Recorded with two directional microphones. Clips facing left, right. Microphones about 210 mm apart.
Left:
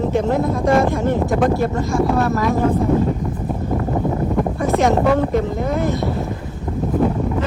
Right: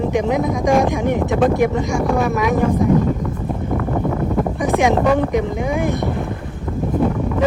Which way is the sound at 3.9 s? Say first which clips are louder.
Even; 10° left (ahead or behind).